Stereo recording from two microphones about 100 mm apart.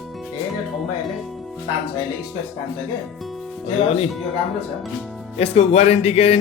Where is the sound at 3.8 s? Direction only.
90° left.